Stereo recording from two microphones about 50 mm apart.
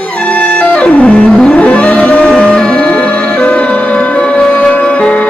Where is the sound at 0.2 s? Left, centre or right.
Left.